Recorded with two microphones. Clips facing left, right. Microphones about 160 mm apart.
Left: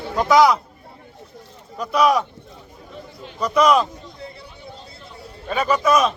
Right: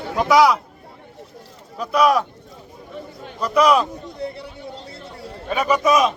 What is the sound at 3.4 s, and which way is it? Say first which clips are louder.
Speech: even; 5° right (ahead or behind).